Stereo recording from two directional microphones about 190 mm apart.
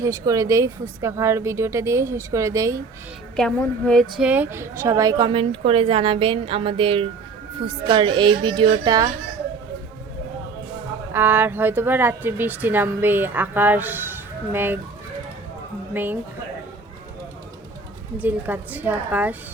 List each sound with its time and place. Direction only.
0.0 s a woman's voice: 15° right (ahead or behind)
3.3 s a woman's voice: 5° left (ahead or behind)
4.1 s a woman's voice: 5° right (ahead or behind); by 9.1 s 20° right (ahead or behind)
11.1 s a woman's voice: 10° right (ahead or behind)
15.9 s speech: 10° right (ahead or behind)
18.2 s a woman's voice: 10° right (ahead or behind)